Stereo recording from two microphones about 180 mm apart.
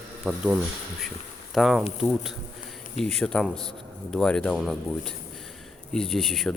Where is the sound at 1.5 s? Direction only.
Centre (ahead or behind).